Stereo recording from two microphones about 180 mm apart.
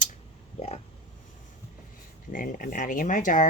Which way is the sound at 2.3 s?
50° left (ahead or behind).